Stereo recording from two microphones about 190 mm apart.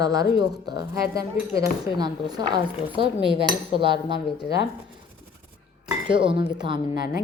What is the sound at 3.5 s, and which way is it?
Cutlery, 25° right (ahead or behind).